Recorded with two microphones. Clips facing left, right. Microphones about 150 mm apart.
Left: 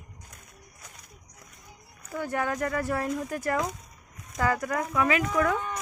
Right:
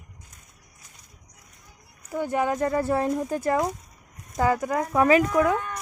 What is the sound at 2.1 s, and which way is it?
Speech, 20° right (ahead or behind).